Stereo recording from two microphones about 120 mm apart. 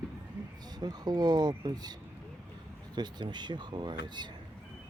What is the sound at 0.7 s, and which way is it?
Speech, 35° right (ahead or behind).